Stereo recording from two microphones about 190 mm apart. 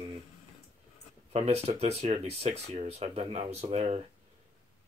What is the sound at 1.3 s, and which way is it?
Speech, 35° right (ahead or behind).